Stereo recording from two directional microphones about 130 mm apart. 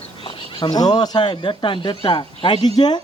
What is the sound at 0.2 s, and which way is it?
A man's voice, 40° left (ahead or behind).